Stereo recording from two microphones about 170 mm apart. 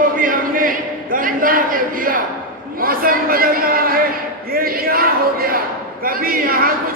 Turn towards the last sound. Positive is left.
turn(degrees=-60)  # may be behind; listen again after turning